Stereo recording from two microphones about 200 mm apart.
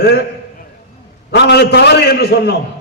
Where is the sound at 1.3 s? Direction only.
60° left (ahead or behind).